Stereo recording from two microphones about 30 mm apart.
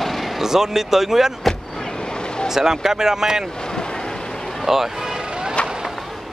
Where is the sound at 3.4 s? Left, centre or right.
Left.